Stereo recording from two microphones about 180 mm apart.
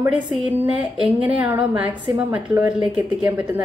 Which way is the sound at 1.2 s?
10° right (ahead or behind).